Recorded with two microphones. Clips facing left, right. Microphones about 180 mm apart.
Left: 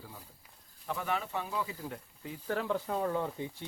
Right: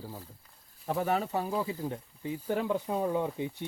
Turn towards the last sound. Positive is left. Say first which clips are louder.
# right 3 dB
turn(degrees=-15)  # may be behind; listen again after turning